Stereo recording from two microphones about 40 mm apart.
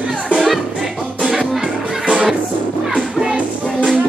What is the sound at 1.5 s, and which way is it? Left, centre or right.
Music, centre.